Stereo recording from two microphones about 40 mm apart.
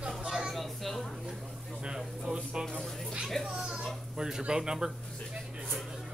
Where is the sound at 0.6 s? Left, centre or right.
Centre.